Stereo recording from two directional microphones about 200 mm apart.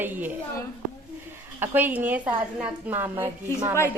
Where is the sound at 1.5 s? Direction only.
10° right (ahead or behind).